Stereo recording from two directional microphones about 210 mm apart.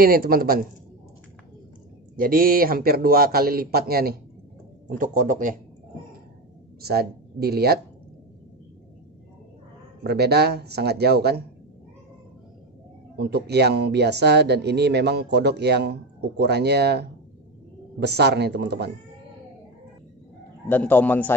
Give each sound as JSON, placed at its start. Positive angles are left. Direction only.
{"t": 0.0, "sound": "speech", "side_deg": -45}
{"t": 2.1, "sound": "speech", "side_deg": -45}
{"t": 6.9, "sound": "speech", "side_deg": -50}
{"t": 10.0, "sound": "speech", "side_deg": -50}
{"t": 13.2, "sound": "speech", "side_deg": -50}
{"t": 20.6, "sound": "speech", "side_deg": 10}